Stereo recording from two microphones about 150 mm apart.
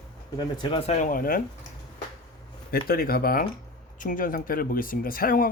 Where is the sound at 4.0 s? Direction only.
65° left (ahead or behind).